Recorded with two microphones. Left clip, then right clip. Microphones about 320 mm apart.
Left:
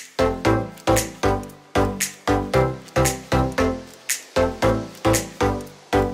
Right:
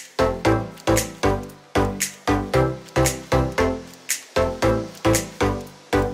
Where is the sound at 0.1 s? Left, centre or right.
Centre.